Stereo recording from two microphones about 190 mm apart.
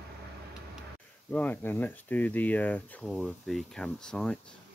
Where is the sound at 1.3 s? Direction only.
5° left (ahead or behind).